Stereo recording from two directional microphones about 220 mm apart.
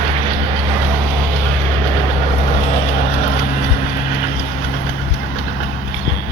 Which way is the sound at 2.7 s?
30° left (ahead or behind).